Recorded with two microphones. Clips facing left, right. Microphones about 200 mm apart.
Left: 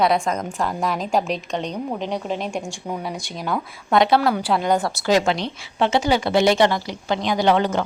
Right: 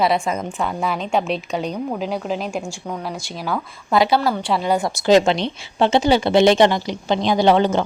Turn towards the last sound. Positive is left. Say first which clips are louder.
# right 3 dB
turn(degrees=-30)  # may be behind; listen again after turning